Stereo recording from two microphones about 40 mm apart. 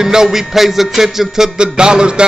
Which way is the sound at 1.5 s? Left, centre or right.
Right.